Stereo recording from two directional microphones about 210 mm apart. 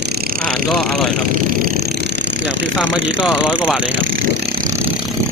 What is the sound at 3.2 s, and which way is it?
Speech, 5° right (ahead or behind).